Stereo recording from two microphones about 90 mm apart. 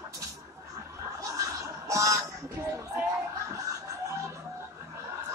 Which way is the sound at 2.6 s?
30° right (ahead or behind).